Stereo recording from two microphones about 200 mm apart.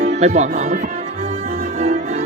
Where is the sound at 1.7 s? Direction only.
30° right (ahead or behind).